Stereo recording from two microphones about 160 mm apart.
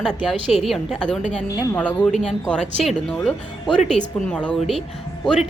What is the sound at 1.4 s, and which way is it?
Speech, 20° left (ahead or behind).